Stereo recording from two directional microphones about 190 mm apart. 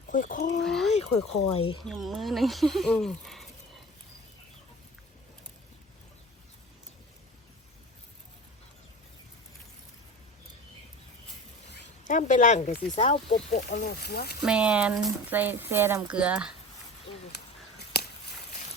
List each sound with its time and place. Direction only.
0.1 s speech: 45° left (ahead or behind)
0.6 s speech: centre (ahead or behind)
1.5 s speech: 30° left (ahead or behind)
1.8 s speech: centre (ahead or behind)
12.0 s speech: 40° left (ahead or behind)
13.7 s speech: 55° left (ahead or behind)
14.4 s speech: 5° right (ahead or behind)